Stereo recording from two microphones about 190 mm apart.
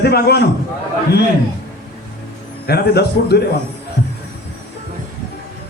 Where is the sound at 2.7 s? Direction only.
55° left (ahead or behind).